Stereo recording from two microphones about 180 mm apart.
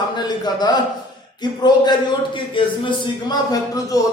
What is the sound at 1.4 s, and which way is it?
Speech, 25° left (ahead or behind).